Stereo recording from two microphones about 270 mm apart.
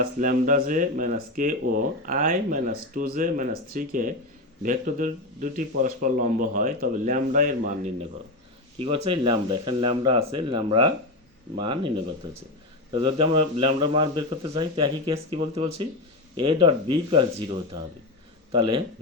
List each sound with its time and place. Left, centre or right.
0.0 s speech: right
8.8 s speech: centre